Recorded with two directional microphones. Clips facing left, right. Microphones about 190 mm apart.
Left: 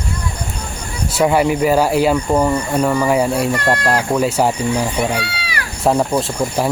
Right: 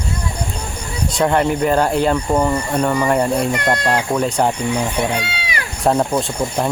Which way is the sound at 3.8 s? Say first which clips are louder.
Left 2 dB; 5° left (ahead or behind).